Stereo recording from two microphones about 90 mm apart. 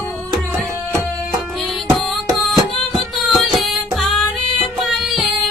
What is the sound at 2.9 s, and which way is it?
Music, centre (ahead or behind).